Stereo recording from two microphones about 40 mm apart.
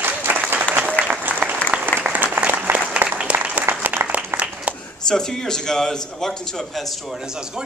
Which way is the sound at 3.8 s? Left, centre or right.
Right.